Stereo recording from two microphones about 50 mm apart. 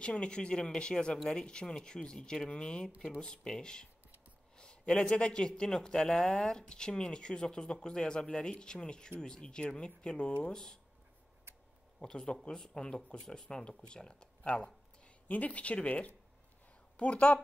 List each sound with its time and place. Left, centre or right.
0.0 s a man's voice: left
12.0 s a man's voice: centre
15.2 s a woman's voice: left